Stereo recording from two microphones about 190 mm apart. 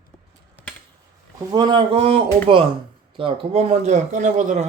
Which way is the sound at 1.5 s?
25° right (ahead or behind).